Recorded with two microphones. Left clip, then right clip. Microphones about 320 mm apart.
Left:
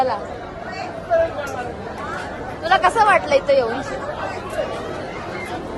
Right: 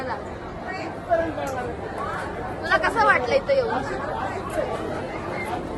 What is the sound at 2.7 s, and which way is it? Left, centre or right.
Speech, centre.